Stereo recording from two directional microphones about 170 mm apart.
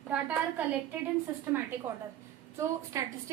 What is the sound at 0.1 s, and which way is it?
Speech, 10° right (ahead or behind).